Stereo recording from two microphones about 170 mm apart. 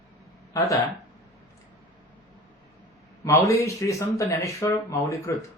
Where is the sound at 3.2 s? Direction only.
20° left (ahead or behind).